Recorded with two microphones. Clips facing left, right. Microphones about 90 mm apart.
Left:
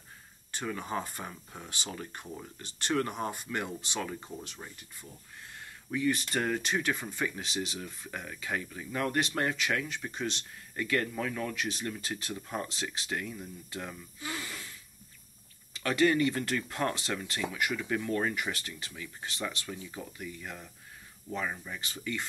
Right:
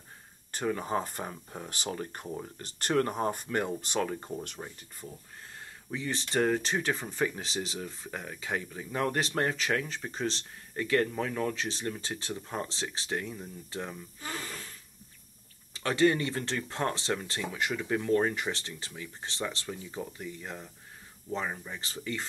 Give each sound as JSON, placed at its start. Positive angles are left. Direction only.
{"t": 0.5, "sound": "speech", "side_deg": -40}
{"t": 5.6, "sound": "speech", "side_deg": -30}
{"t": 15.7, "sound": "speech", "side_deg": -30}